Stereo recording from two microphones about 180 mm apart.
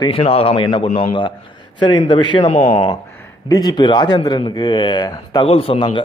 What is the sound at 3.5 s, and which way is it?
Speech, 20° left (ahead or behind).